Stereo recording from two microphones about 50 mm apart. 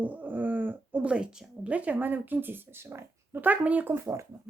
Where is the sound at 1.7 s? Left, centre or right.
Right.